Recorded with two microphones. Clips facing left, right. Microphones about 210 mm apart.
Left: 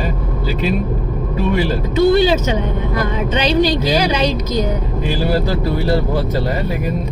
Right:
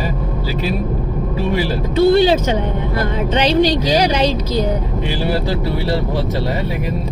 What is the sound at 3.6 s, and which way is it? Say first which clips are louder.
Speech: even; 10° left (ahead or behind).